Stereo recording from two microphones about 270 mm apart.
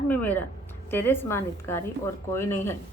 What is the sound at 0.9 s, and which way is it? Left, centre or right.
A woman's voice, centre.